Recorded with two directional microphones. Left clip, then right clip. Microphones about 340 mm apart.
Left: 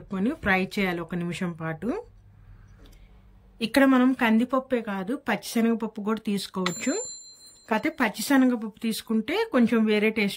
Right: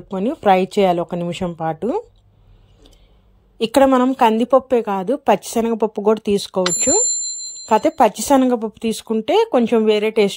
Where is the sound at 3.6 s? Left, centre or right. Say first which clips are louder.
Right 8 dB; centre.